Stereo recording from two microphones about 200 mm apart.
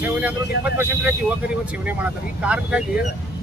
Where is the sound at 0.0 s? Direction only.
10° right (ahead or behind).